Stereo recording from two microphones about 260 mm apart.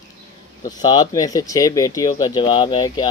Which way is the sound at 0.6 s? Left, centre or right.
Centre.